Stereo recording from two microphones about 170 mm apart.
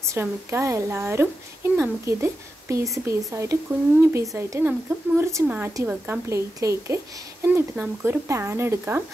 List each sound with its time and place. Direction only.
0.0 s speech: 15° right (ahead or behind)